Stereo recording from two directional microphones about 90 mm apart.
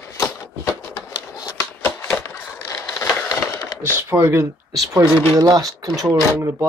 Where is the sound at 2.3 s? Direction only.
30° left (ahead or behind).